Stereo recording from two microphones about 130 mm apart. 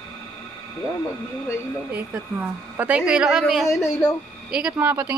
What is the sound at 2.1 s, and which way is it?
A woman's voice, 15° right (ahead or behind).